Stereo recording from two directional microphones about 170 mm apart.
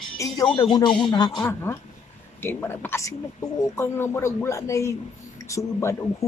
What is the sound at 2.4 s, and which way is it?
Speech, 15° left (ahead or behind).